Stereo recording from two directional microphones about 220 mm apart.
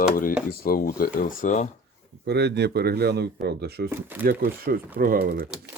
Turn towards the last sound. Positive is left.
turn(degrees=-40)  # may be behind; listen again after turning